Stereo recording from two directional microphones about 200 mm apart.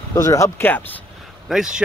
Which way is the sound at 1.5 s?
5° right (ahead or behind).